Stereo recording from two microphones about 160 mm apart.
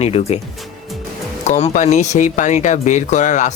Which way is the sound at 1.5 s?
45° left (ahead or behind).